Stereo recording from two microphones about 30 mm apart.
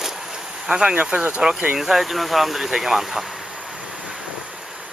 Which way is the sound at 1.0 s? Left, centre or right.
Right.